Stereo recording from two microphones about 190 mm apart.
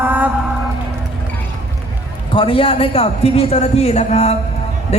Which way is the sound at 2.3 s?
30° left (ahead or behind).